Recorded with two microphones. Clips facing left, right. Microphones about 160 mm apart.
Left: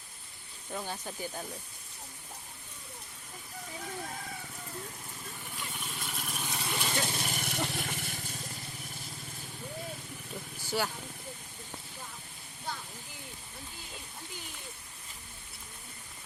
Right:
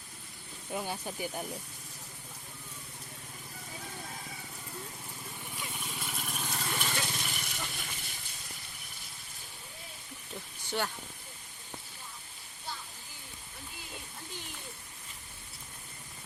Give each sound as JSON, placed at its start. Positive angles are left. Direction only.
{"t": 0.7, "sound": "speech", "side_deg": -10}
{"t": 5.5, "sound": "vehicle", "side_deg": -10}
{"t": 6.7, "sound": "vehicle", "side_deg": 15}
{"t": 7.2, "sound": "vehicle", "side_deg": 45}
{"t": 10.7, "sound": "speech", "side_deg": 5}